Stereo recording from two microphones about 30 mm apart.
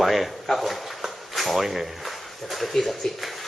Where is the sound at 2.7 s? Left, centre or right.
Centre.